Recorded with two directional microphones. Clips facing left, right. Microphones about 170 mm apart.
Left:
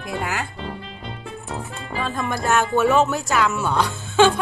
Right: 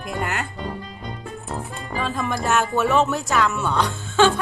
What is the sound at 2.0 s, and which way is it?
Speech, centre (ahead or behind).